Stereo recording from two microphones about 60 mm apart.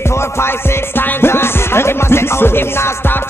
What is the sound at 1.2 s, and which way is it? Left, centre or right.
Music, left.